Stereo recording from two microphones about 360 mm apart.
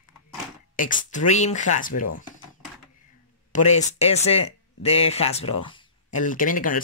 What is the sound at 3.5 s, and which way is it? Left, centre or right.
Speech, centre.